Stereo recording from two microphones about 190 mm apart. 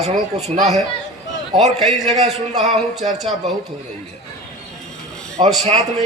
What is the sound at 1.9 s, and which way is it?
A man's voice, 35° right (ahead or behind).